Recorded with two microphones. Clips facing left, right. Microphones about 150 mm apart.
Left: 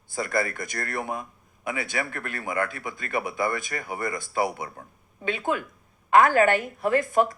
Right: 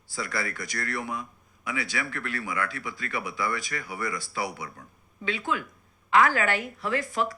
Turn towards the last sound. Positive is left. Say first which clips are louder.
# left 6 dB
turn(degrees=50)  # may be behind; listen again after turning